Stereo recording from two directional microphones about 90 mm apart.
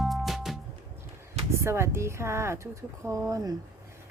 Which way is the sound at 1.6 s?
30° right (ahead or behind).